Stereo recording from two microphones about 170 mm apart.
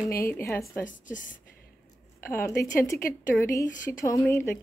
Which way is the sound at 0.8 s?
50° left (ahead or behind).